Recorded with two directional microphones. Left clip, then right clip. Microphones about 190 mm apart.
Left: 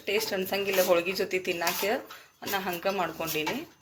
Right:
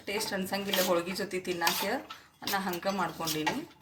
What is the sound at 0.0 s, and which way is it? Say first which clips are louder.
Speech: left 5 dB; 10° left (ahead or behind).